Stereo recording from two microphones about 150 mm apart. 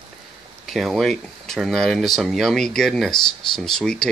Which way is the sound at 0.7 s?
Centre (ahead or behind).